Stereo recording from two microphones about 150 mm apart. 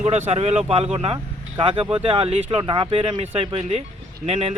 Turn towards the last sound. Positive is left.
turn(degrees=-45)  # may be behind; listen again after turning